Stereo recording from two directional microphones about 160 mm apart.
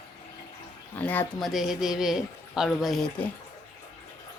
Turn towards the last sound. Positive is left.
turn(degrees=0)  # may be behind; listen again after turning